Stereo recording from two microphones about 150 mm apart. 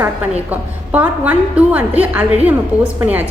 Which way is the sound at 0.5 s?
10° right (ahead or behind).